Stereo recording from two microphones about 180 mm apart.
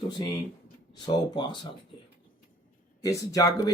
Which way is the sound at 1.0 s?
25° left (ahead or behind).